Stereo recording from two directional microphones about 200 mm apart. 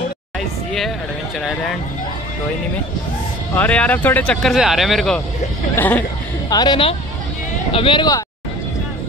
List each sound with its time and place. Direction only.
1.4 s speech: centre (ahead or behind)
3.5 s speech: 5° left (ahead or behind)
6.5 s speech: 20° left (ahead or behind)